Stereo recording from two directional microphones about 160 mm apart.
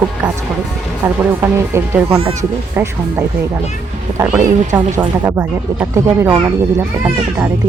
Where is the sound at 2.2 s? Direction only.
40° right (ahead or behind).